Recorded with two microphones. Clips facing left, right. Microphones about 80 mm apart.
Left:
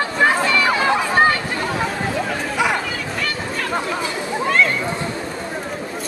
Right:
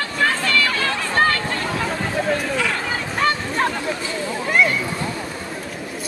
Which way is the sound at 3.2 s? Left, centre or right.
Right.